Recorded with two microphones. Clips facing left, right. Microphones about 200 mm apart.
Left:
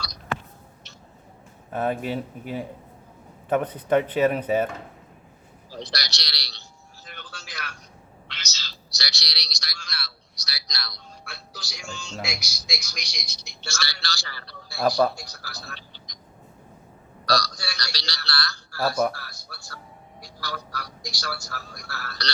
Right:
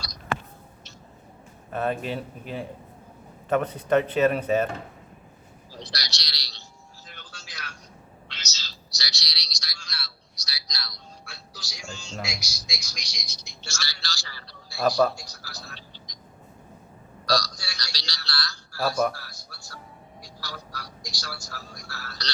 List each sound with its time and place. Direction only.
1.7 s speech: 10° left (ahead or behind)
5.8 s a sound: 65° left (ahead or behind)
7.0 s music: 65° left (ahead or behind)
8.3 s a sound: 60° left (ahead or behind)
12.2 s a woman's voice: 65° left (ahead or behind)
14.8 s a man's voice: 5° left (ahead or behind)
15.1 s a woman's voice: 60° left (ahead or behind)
17.2 s a man's voice: 65° left (ahead or behind)